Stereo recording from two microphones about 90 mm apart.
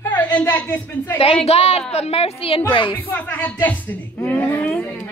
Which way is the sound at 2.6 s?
60° left (ahead or behind).